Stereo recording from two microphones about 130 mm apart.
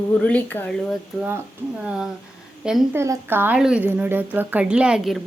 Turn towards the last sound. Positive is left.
turn(degrees=-5)  # may be behind; listen again after turning